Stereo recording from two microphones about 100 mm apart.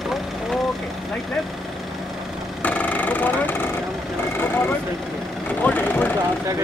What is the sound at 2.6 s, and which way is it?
Vehicle, 15° left (ahead or behind).